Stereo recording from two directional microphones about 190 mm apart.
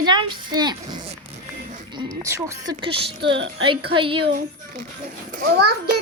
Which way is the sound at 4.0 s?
30° right (ahead or behind).